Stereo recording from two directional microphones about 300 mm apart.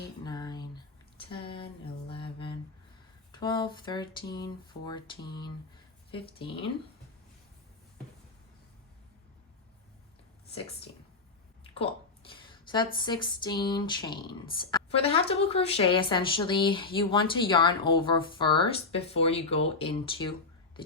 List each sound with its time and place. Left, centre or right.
0.3 s a sound: centre
3.3 s a woman's voice: centre
6.1 s a woman's voice: centre
11.7 s a woman's voice: centre